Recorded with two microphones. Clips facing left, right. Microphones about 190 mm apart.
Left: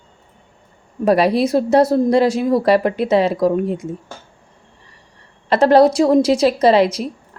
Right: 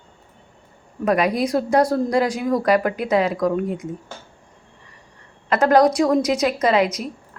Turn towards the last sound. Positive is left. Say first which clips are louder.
# left 5 dB
turn(degrees=30)  # may be behind; listen again after turning